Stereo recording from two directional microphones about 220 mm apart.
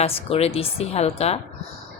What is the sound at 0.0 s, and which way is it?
Speech, 25° left (ahead or behind).